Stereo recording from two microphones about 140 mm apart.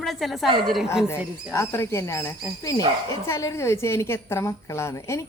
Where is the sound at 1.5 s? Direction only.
20° left (ahead or behind).